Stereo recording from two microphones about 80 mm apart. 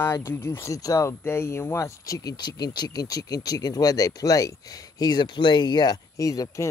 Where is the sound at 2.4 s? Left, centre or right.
Left.